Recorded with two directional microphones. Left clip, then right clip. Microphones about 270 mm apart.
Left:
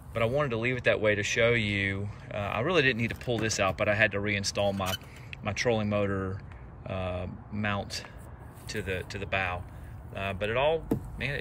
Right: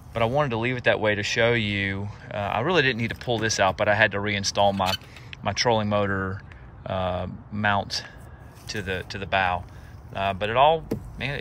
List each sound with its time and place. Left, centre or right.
0.1 s speech: centre